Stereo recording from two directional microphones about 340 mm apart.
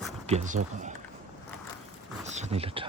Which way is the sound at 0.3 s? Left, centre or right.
Centre.